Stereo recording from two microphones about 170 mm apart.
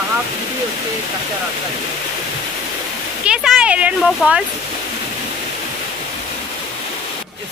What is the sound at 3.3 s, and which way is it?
Speech, 5° right (ahead or behind).